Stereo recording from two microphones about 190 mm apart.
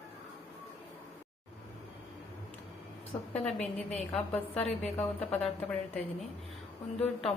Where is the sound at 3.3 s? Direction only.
5° left (ahead or behind).